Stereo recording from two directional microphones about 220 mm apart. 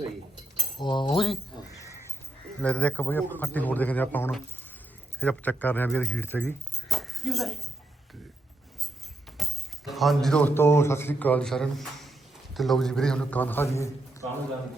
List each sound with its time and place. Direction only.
0.8 s keys jangling: 20° left (ahead or behind)
2.6 s a man's voice: 5° left (ahead or behind)
9.4 s a man's voice: centre (ahead or behind)